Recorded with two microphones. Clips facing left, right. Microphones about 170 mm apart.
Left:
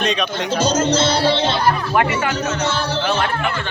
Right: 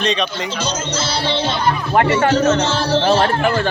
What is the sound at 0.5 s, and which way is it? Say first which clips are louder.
Speech: left 6 dB; 45° left (ahead or behind).